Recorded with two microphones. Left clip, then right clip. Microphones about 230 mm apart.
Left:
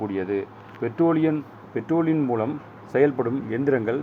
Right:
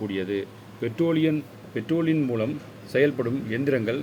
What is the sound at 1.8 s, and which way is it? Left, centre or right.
Speech, left.